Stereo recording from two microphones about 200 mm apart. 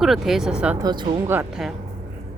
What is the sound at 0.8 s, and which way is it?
Speech, 20° right (ahead or behind).